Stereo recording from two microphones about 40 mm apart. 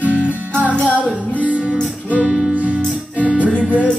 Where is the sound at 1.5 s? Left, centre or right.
Right.